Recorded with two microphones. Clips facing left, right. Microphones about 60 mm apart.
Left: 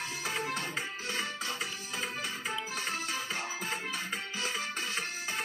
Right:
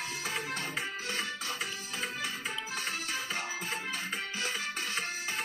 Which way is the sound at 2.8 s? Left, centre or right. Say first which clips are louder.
Left 1 dB; left.